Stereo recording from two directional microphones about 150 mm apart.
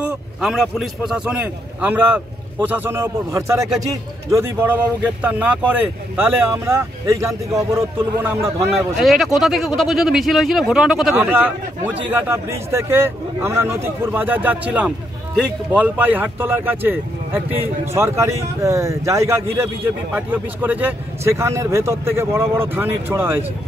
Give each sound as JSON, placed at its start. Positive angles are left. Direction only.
{"t": 0.0, "sound": "speech", "side_deg": -5}
{"t": 8.9, "sound": "speech", "side_deg": 0}